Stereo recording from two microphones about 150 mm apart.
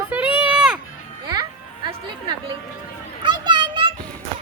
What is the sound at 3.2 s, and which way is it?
Children playing, 30° right (ahead or behind).